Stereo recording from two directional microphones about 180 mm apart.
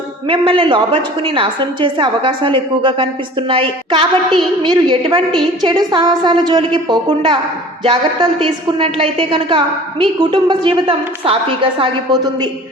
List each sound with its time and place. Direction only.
0.3 s a woman's voice: 30° right (ahead or behind)